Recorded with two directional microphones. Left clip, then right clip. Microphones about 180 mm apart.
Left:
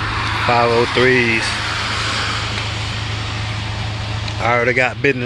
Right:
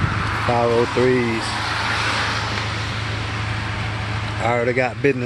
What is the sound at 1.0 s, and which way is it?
Speech, 10° right (ahead or behind).